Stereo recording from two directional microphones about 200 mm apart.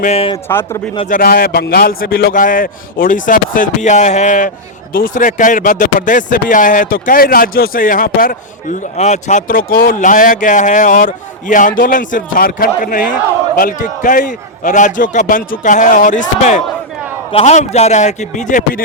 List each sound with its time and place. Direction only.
0.0 s speech: 30° left (ahead or behind)
0.4 s speech: 10° left (ahead or behind)
1.1 s a man's voice: 50° left (ahead or behind)